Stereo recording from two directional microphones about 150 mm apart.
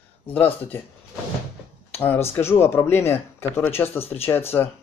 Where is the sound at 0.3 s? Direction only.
10° left (ahead or behind).